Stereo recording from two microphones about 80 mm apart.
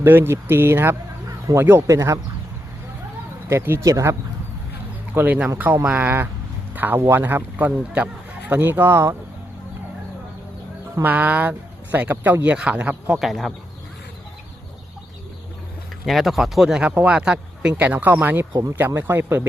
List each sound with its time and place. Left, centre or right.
0.0 s speech: right
1.9 s speech: right
3.5 s speech: right
3.8 s speech: right
5.1 s speech: right
11.0 s speech: right
13.1 s speech: centre
16.0 s speech: centre; by 19.4 s right